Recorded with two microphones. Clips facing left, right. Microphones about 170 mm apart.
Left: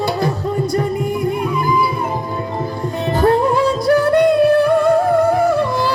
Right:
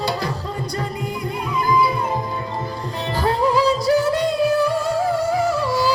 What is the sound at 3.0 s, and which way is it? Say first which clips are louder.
Music: left 6 dB; 55° left (ahead or behind).